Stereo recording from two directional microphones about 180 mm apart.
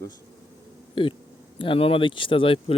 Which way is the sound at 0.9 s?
30° left (ahead or behind).